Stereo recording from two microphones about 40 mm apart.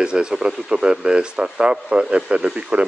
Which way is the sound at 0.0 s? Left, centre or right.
Right.